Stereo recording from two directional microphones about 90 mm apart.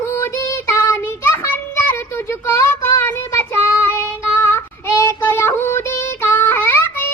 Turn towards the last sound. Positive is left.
turn(degrees=25)  # may be behind; listen again after turning